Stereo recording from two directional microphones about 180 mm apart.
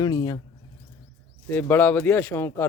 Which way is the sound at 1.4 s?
10° left (ahead or behind).